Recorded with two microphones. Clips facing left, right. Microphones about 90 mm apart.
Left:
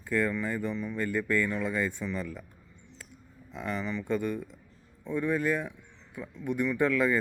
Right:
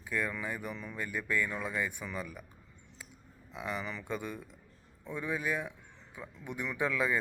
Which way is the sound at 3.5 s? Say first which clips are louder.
Left 5 dB; 15° right (ahead or behind).